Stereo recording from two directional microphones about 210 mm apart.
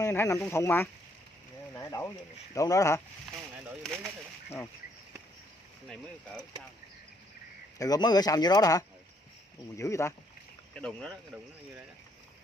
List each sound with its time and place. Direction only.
0.0 s speech: 15° left (ahead or behind)
3.6 s speech: centre (ahead or behind)
5.9 s speech: 5° left (ahead or behind)
7.8 s speech: 20° left (ahead or behind); by 11.1 s 5° left (ahead or behind)